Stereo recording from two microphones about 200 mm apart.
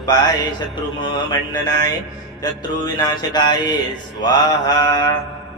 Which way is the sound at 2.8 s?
20° left (ahead or behind).